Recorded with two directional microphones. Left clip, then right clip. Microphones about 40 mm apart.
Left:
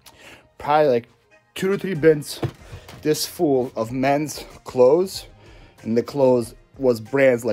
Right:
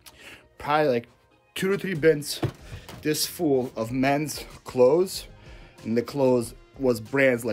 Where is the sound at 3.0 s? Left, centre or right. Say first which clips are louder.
Left 5 dB; left.